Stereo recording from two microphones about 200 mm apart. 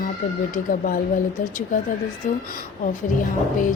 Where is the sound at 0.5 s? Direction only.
45° left (ahead or behind).